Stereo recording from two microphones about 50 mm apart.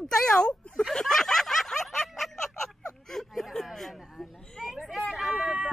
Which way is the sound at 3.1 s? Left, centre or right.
Centre.